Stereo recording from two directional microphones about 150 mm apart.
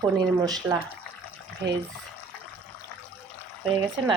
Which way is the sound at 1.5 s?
10° left (ahead or behind).